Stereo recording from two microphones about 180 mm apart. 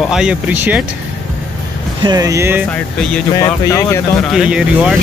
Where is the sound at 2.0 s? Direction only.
20° right (ahead or behind).